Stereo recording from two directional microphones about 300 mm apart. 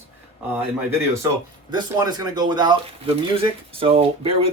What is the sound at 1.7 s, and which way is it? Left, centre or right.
Speech, centre.